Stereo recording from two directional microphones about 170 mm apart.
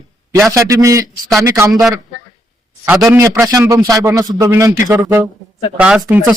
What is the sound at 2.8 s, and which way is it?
A man's voice, 10° right (ahead or behind).